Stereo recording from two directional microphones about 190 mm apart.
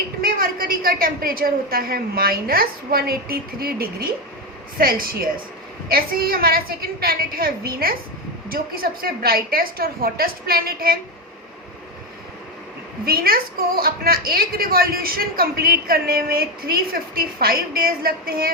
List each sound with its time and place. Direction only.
0.2 s a woman's voice: 50° right (ahead or behind)
13.1 s a woman's voice: 50° right (ahead or behind)